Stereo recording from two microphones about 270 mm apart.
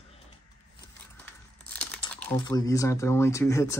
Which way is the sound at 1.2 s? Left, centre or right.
Centre.